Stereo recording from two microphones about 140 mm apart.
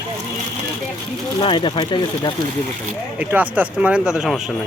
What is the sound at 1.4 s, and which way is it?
Speech, 35° left (ahead or behind).